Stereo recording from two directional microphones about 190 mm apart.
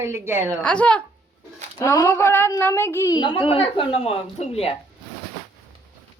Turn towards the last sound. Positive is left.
turn(degrees=30)  # may be behind; listen again after turning